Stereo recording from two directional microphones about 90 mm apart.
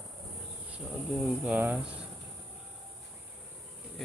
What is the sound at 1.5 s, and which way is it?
Speech, 15° right (ahead or behind).